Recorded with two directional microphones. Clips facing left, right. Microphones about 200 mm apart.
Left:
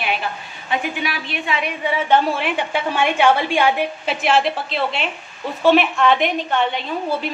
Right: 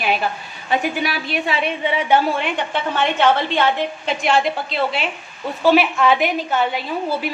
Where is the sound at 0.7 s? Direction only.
40° right (ahead or behind).